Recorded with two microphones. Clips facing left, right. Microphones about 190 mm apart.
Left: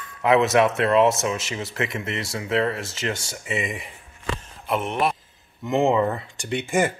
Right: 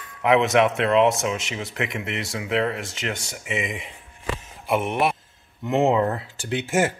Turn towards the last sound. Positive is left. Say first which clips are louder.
# even
turn(degrees=0)  # may be behind; listen again after turning